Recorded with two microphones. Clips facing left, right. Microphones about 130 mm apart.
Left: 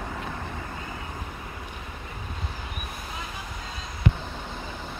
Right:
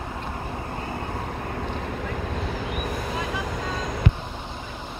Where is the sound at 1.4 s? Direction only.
65° right (ahead or behind).